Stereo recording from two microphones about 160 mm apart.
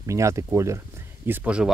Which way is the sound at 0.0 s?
20° right (ahead or behind).